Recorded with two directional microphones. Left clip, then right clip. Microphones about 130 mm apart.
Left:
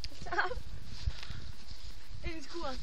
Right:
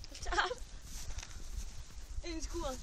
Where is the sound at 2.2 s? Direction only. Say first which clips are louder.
Even; 60° right (ahead or behind).